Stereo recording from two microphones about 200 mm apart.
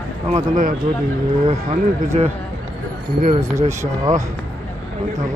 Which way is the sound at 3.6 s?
15° right (ahead or behind).